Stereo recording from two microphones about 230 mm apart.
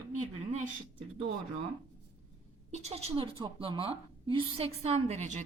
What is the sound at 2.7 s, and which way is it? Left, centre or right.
A woman's voice, right.